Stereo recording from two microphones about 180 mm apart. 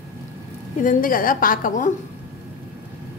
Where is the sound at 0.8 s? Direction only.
50° left (ahead or behind).